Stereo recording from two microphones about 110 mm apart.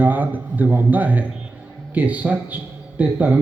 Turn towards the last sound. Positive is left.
turn(degrees=-15)  # may be behind; listen again after turning